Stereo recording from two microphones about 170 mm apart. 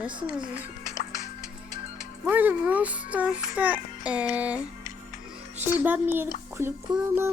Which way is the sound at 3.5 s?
10° right (ahead or behind).